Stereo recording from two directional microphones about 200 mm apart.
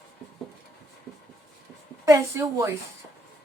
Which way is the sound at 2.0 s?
15° right (ahead or behind).